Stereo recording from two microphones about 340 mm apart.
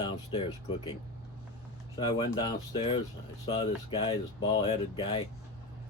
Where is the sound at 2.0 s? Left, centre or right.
Centre.